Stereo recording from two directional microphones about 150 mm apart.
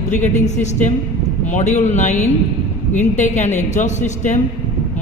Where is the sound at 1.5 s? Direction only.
50° left (ahead or behind).